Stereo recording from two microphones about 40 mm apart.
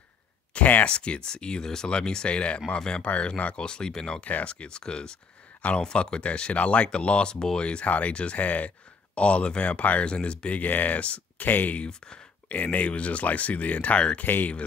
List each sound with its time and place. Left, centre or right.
0.6 s a sound: left
0.8 s speech: left
3.5 s speech: left
4.2 s speech: left
4.5 s speech: left
10.6 s speech: left
14.2 s speech: left